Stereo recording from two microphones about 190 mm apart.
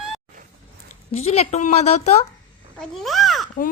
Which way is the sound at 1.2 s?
35° left (ahead or behind).